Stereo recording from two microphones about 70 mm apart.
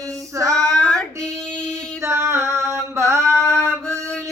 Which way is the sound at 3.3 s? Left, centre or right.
Centre.